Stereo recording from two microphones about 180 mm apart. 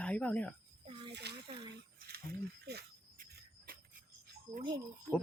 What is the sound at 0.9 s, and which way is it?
Snake, 25° right (ahead or behind).